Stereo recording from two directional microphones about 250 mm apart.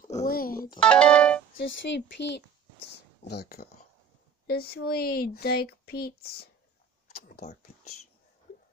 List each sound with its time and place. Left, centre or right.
0.3 s a child's voice: left
0.7 s music: centre
1.6 s speech: left
7.2 s a sound: left